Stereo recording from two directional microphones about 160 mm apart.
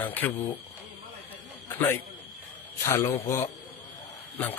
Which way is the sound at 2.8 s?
20° left (ahead or behind).